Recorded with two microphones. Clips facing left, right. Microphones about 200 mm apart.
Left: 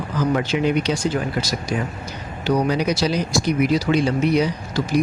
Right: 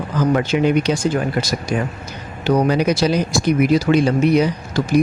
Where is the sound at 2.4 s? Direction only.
55° right (ahead or behind).